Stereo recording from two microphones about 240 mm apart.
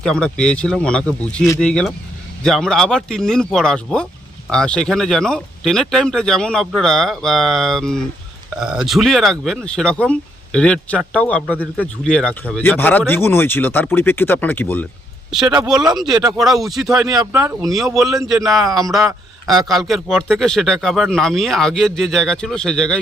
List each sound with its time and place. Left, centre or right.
0.0 s speech: centre
15.7 s speech: centre
16.2 s speech: centre
17.2 s speech: centre
17.9 s speech: centre
18.2 s speech: centre
18.7 s speech: centre